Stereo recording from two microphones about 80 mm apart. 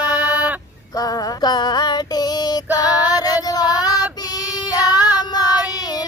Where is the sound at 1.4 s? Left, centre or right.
Left.